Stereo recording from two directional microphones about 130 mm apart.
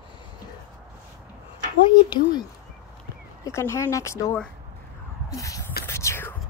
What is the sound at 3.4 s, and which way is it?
Speech, 20° left (ahead or behind).